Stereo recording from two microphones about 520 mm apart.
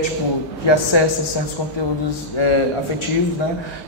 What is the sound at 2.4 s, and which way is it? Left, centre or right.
Speech, left.